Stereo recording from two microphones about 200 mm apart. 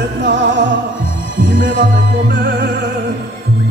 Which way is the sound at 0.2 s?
65° right (ahead or behind).